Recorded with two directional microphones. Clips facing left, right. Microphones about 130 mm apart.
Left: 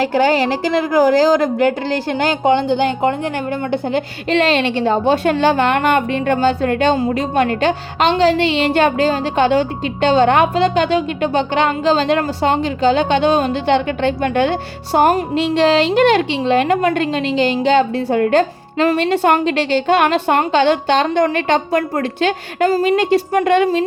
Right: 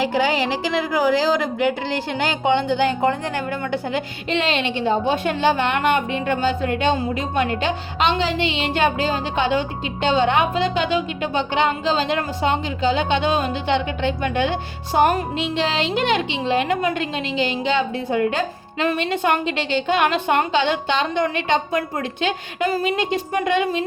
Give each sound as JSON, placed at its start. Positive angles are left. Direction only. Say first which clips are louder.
{"t": 0.1, "sound": "a woman's voice", "louder": "left 5 dB", "side_deg": 45}
{"t": 2.6, "sound": "speech", "louder": "left 3 dB", "side_deg": 20}
{"t": 3.9, "sound": "a woman's voice", "louder": "left 6 dB", "side_deg": 45}
{"t": 6.4, "sound": "a woman's voice", "louder": "left 5 dB", "side_deg": 40}
{"t": 14.2, "sound": "a woman's voice", "louder": "left 5 dB", "side_deg": 65}
{"t": 14.9, "sound": "a woman's voice", "louder": "left 4 dB", "side_deg": 40}
{"t": 15.6, "sound": "a woman's voice", "louder": "left 10 dB", "side_deg": 50}
{"t": 17.3, "sound": "a woman's voice", "louder": "left 7 dB", "side_deg": 45}
{"t": 17.9, "sound": "a woman's voice", "louder": "left 7 dB", "side_deg": 55}